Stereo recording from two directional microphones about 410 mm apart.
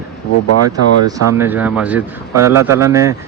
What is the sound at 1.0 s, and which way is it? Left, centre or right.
A man's voice, centre.